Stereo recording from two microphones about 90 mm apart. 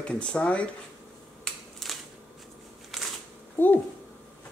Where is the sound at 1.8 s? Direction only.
5° left (ahead or behind).